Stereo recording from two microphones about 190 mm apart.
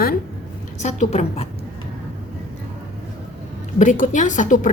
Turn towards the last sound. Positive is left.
turn(degrees=40)  # may be behind; listen again after turning